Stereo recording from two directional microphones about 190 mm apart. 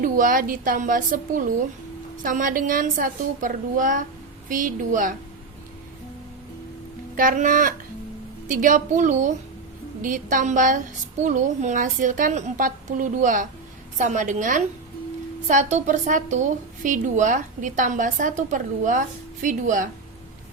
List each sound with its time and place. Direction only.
0.0 s a woman's voice: 45° right (ahead or behind)
7.2 s a woman's voice: 45° right (ahead or behind)